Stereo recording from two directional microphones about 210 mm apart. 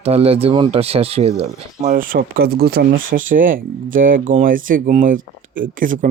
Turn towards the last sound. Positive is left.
turn(degrees=-40)  # may be behind; listen again after turning